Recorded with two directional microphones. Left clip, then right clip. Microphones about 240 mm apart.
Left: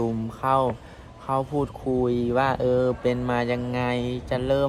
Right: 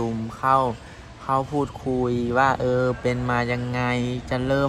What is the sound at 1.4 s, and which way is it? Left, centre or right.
Speech, centre.